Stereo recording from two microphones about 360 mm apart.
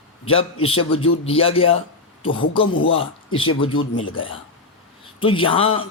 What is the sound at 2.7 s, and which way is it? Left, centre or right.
A man's voice, left.